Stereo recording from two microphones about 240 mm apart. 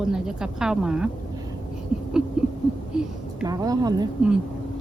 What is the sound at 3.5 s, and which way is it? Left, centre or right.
Speech, centre.